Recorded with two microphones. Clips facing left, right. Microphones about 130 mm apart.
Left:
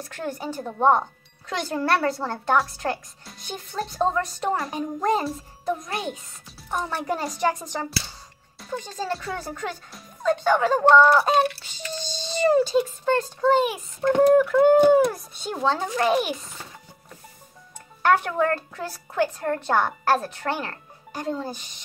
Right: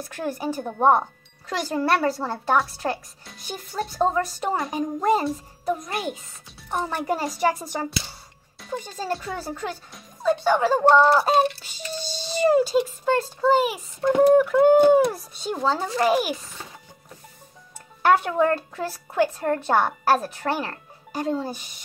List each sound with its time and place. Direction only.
0.0 s a woman's voice: 10° right (ahead or behind)
10.9 s speech: 25° right (ahead or behind)
12.0 s a woman's voice: 10° right (ahead or behind)
18.0 s a woman's voice: 10° right (ahead or behind)